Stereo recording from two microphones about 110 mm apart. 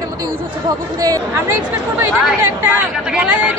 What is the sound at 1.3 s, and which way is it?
Speech, 25° right (ahead or behind).